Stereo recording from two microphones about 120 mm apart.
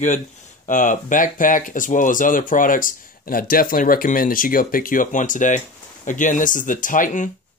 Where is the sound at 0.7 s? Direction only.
90° left.